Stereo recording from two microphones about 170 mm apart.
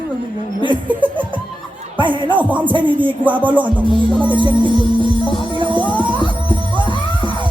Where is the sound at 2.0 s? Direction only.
30° right (ahead or behind).